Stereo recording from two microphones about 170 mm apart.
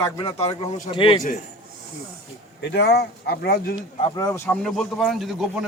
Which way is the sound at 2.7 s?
80° left.